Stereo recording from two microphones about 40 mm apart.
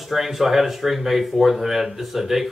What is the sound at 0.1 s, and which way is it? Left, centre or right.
Speech, centre.